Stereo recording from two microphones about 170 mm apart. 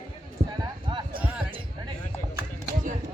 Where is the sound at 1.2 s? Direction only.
10° right (ahead or behind).